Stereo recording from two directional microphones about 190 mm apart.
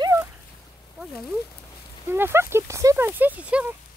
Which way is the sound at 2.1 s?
10° right (ahead or behind).